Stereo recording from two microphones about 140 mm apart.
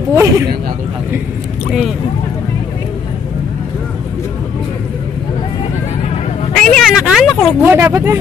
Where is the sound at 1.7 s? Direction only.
5° right (ahead or behind).